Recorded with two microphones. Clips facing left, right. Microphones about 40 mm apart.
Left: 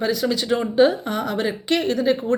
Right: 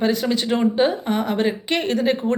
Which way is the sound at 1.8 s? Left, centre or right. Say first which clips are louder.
Right 2 dB; right.